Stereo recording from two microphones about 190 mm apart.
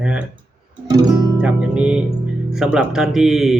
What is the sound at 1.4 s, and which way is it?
Speech, 5° right (ahead or behind).